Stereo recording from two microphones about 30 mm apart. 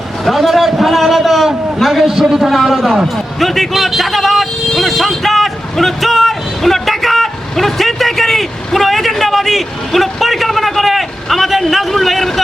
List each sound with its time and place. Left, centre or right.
0.3 s a sound: centre
1.8 s vehicle: centre
2.2 s a man's voice: right
2.5 s a man's voice: centre
3.4 s vehicle: centre
11.9 s a sound: centre